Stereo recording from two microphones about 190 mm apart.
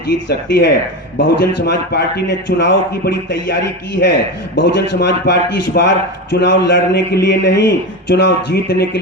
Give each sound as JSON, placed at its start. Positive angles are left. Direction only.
{"t": 0.3, "sound": "a man's voice", "side_deg": 70}